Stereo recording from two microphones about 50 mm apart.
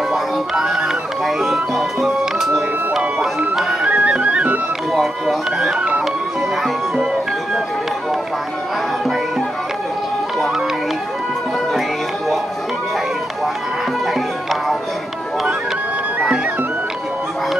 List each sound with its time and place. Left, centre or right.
0.1 s music: centre
3.9 s music: right
4.9 s speech: centre
14.1 s music: centre